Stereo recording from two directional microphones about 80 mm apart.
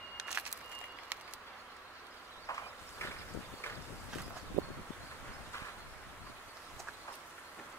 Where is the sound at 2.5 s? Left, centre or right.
Left.